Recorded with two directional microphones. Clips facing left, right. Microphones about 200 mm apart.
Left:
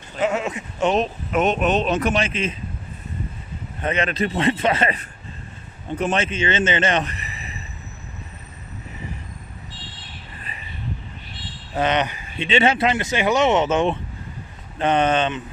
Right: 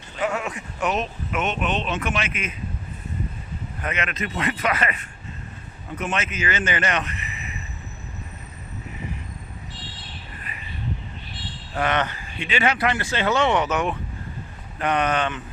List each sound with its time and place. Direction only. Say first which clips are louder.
0.2 s speech: left 4 dB; 25° left (ahead or behind)
3.8 s speech: left 7 dB; 30° left (ahead or behind)
11.7 s speech: left 3 dB; 20° left (ahead or behind)